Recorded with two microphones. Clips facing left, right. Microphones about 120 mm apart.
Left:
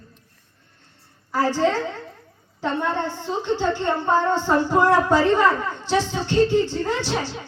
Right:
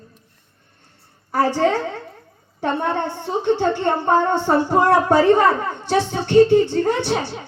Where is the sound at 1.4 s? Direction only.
60° right (ahead or behind).